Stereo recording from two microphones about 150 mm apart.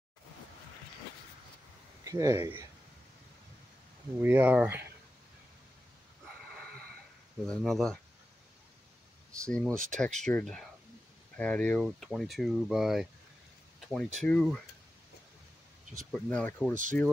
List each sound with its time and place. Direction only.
2.0 s speech: 20° right (ahead or behind)
4.2 s speech: 10° right (ahead or behind)
7.4 s speech: 5° left (ahead or behind)
9.4 s speech: 5° left (ahead or behind)
16.1 s speech: 5° left (ahead or behind)